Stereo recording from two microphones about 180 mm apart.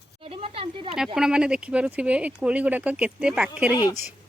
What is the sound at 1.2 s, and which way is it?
Speech, 5° right (ahead or behind).